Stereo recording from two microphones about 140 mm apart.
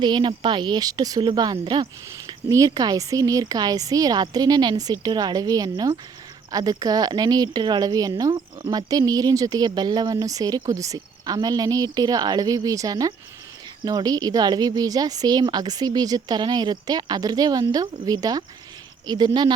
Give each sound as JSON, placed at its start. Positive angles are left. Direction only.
{"t": 0.0, "sound": "speech", "side_deg": -35}